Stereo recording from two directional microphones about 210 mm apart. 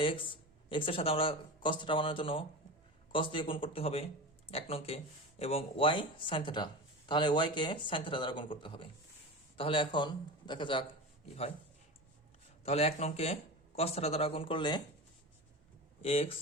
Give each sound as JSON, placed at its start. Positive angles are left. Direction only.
{"t": 0.0, "sound": "speech", "side_deg": 25}
{"t": 12.6, "sound": "speech", "side_deg": 30}
{"t": 16.0, "sound": "speech", "side_deg": 25}